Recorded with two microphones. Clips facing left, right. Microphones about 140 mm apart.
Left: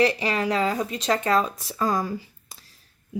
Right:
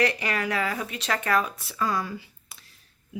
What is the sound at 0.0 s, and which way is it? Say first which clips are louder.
Speech: left 4 dB; 25° left (ahead or behind).